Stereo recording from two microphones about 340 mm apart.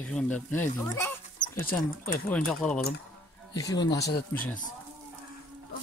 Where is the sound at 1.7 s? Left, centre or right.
Left.